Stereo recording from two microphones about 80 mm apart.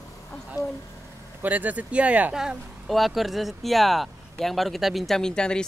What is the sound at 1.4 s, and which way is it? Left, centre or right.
Speech, right.